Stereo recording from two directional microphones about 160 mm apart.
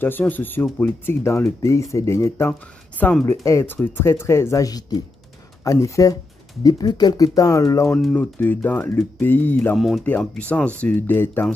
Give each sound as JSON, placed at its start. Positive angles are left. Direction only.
{"t": 0.0, "sound": "speech", "side_deg": 10}
{"t": 7.9, "sound": "speech", "side_deg": 5}
{"t": 9.8, "sound": "speech", "side_deg": 0}